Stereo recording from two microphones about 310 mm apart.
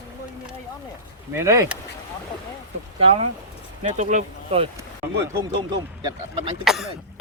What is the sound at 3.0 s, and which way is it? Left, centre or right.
Speech, centre.